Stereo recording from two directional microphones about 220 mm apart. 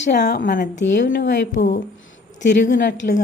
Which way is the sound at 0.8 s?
55° left (ahead or behind).